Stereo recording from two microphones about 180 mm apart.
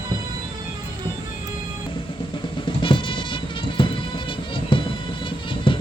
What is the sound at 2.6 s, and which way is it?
Music, 30° left (ahead or behind).